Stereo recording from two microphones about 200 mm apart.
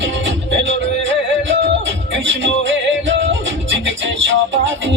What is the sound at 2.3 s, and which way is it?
Music, 65° right (ahead or behind).